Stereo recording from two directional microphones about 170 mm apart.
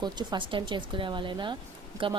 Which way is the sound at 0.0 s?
25° right (ahead or behind).